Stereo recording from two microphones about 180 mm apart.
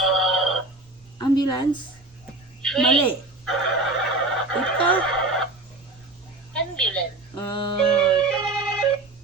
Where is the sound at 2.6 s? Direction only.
5° left (ahead or behind).